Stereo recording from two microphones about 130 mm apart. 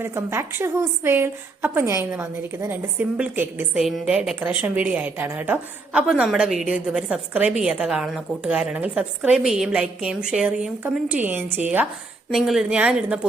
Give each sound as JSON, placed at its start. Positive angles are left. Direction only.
{"t": 0.0, "sound": "a woman's voice", "side_deg": -20}
{"t": 3.8, "sound": "a woman's voice", "side_deg": 0}
{"t": 12.3, "sound": "a woman's voice", "side_deg": 0}